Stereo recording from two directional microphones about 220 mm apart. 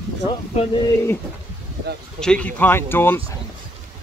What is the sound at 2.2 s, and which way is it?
Speech, 5° left (ahead or behind).